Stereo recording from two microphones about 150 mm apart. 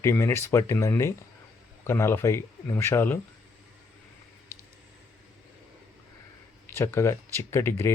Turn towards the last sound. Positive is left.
turn(degrees=15)  # may be behind; listen again after turning